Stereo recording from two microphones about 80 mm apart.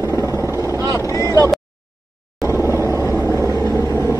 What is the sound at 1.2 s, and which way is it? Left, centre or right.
Vehicle, right.